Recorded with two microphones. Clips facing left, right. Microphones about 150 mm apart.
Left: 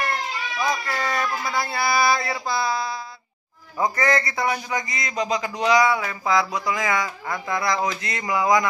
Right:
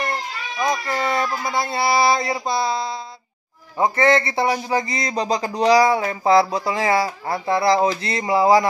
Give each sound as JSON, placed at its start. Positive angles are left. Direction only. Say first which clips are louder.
{"t": 0.1, "sound": "a man's voice", "louder": "even", "side_deg": -20}